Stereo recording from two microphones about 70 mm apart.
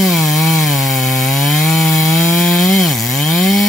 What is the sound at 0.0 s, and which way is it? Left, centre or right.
Chainsaw, centre.